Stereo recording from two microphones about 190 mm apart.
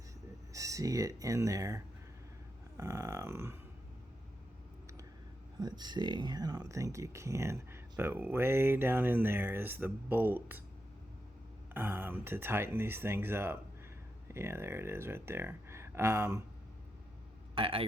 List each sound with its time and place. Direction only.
0.5 s speech: 15° right (ahead or behind)
5.5 s speech: 20° right (ahead or behind)
11.7 s speech: 10° right (ahead or behind)
17.5 s speech: 25° right (ahead or behind)